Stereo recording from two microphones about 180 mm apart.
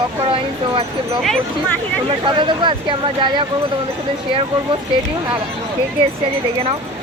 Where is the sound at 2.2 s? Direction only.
25° right (ahead or behind).